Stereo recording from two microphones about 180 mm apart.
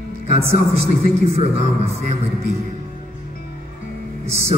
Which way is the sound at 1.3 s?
35° right (ahead or behind).